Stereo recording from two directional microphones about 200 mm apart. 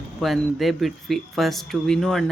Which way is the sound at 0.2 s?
Centre (ahead or behind).